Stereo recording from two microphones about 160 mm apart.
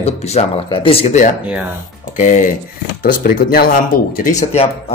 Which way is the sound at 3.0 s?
70° left (ahead or behind).